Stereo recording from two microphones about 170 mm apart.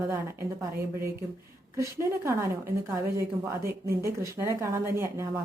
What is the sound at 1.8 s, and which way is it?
Speech, 15° right (ahead or behind).